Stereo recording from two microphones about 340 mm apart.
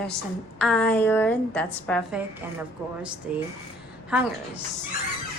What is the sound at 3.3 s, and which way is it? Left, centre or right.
Speech, centre.